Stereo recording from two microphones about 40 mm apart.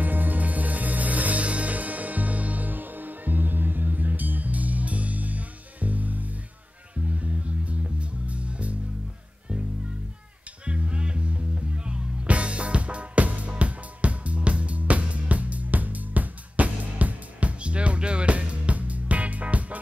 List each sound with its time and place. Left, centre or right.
0.0 s music: right
7.8 s music: right
10.6 s music: right